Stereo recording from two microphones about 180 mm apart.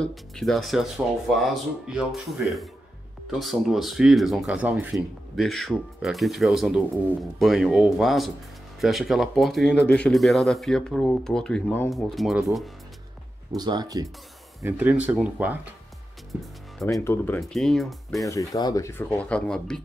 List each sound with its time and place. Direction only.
0.0 s speech: centre (ahead or behind)
3.3 s speech: centre (ahead or behind)
13.6 s speech: 25° right (ahead or behind)
14.6 s speech: 10° right (ahead or behind)
17.0 s speech: 10° left (ahead or behind)
18.2 s speech: 15° left (ahead or behind)